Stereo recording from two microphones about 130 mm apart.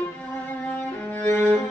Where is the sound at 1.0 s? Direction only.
10° left (ahead or behind).